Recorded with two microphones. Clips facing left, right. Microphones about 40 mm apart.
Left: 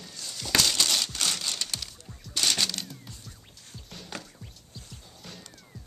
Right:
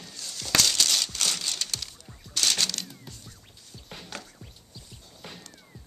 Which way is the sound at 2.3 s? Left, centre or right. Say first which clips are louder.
Even; centre.